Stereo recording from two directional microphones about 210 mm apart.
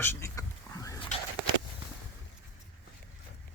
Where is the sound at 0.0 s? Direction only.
10° left (ahead or behind).